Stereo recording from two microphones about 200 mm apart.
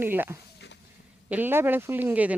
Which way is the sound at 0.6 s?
60° left (ahead or behind).